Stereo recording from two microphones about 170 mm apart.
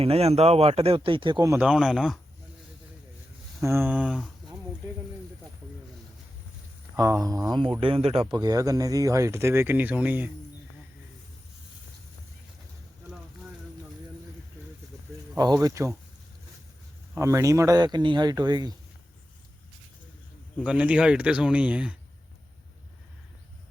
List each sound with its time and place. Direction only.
0.0 s speech: 35° right (ahead or behind)
1.5 s speech: 5° right (ahead or behind)
3.6 s speech: 15° right (ahead or behind)
6.9 s speech: 20° right (ahead or behind)
7.8 s speech: 30° right (ahead or behind); by 10.2 s 10° right (ahead or behind)
15.4 s speech: 20° right (ahead or behind)
17.2 s speech: 15° right (ahead or behind)
20.7 s speech: 5° right (ahead or behind)